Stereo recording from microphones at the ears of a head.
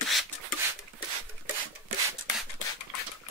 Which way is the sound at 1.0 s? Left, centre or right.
Right.